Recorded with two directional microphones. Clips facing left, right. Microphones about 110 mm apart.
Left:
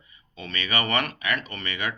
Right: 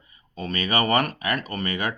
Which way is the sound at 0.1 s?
45° right (ahead or behind).